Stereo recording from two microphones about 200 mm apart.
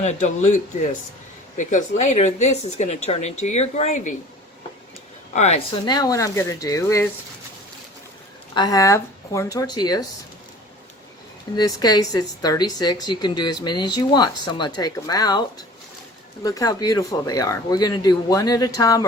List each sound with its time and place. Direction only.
0.0 s speech: 35° left (ahead or behind)
5.3 s speech: 35° left (ahead or behind); by 7.1 s 15° left (ahead or behind)
8.5 s speech: 20° left (ahead or behind)
11.5 s a woman's voice: 20° left (ahead or behind)